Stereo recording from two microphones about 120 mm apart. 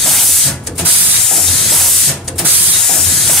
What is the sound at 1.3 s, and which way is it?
Steam, centre (ahead or behind).